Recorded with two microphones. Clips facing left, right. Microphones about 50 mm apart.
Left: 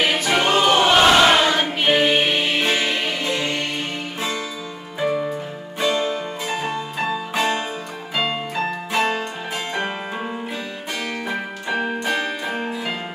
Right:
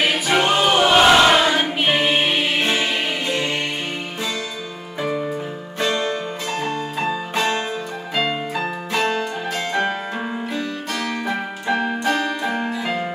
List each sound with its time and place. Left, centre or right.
0.0 s choir: centre
2.7 s music: centre
5.0 s music: centre
5.8 s music: centre
8.3 s music: centre
8.9 s music: centre
11.1 s music: centre
11.7 s keyboard: centre
12.4 s music: centre